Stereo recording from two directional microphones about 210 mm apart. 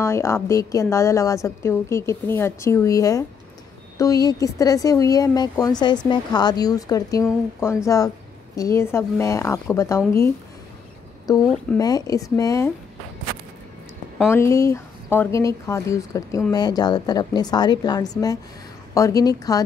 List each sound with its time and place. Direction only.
0.0 s speech: 10° left (ahead or behind)
14.3 s speech: 15° left (ahead or behind)